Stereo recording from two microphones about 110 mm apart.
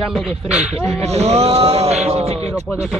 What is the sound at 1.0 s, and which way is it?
Speech, 70° right (ahead or behind).